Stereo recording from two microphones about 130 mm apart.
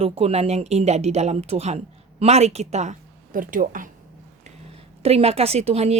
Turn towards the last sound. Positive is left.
turn(degrees=-55)  # may be behind; listen again after turning